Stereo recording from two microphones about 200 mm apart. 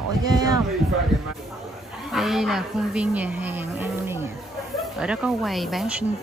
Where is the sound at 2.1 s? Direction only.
Centre (ahead or behind).